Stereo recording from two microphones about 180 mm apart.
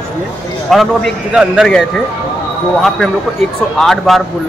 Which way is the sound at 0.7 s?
Centre (ahead or behind).